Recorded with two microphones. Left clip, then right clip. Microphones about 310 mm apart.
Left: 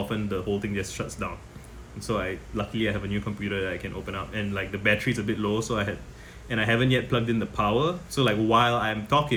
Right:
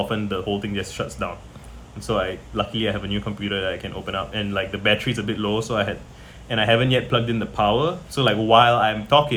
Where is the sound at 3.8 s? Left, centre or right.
Centre.